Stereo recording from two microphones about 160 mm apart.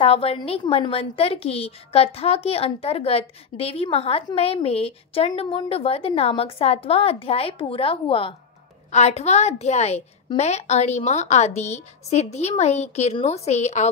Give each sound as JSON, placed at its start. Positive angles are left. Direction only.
{"t": 0.0, "sound": "a woman's voice", "side_deg": 40}